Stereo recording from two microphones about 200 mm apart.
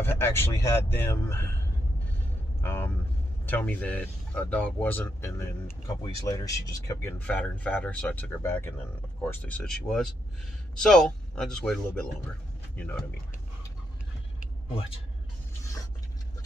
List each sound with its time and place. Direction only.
0.0 s speech: 10° left (ahead or behind)
2.6 s a man's voice: 10° left (ahead or behind)